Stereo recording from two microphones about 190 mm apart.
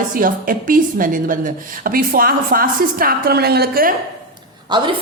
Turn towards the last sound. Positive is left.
turn(degrees=-25)  # may be behind; listen again after turning